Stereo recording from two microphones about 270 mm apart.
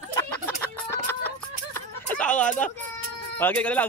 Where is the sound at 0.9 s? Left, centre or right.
Centre.